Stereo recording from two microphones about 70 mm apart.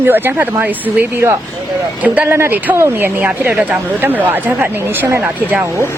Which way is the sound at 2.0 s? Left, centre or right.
Right.